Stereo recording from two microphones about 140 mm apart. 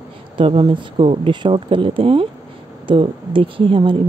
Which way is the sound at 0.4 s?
35° right (ahead or behind).